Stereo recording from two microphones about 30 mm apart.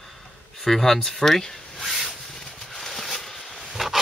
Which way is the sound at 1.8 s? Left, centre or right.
Centre.